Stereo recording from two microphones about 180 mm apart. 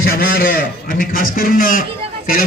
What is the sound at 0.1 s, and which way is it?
A man's voice, 55° left (ahead or behind).